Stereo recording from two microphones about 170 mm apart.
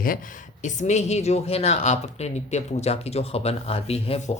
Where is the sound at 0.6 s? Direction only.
45° left (ahead or behind).